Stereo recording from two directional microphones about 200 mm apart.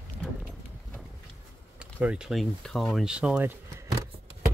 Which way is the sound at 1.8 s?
5° right (ahead or behind).